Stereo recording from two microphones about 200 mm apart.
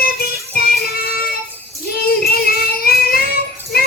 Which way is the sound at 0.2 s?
50° left (ahead or behind).